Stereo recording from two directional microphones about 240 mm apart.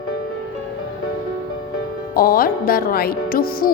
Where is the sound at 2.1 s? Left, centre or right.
Left.